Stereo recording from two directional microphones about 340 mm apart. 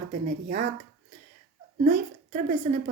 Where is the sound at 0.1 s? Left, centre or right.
Right.